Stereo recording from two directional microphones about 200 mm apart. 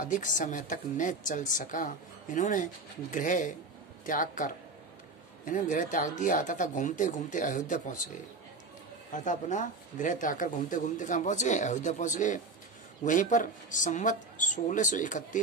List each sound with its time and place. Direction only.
0.0 s a woman's voice: 40° left (ahead or behind)
9.1 s a woman's voice: 40° left (ahead or behind)